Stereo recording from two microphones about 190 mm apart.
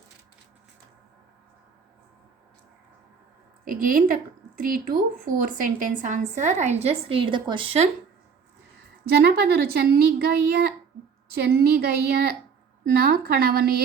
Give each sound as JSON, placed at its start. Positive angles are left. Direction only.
{"t": 3.7, "sound": "a woman's voice", "side_deg": -45}
{"t": 9.0, "sound": "speech", "side_deg": -55}